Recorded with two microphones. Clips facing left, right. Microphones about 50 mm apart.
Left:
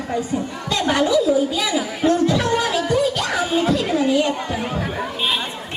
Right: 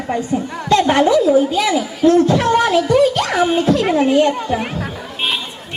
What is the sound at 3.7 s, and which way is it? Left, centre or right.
Children playing, right.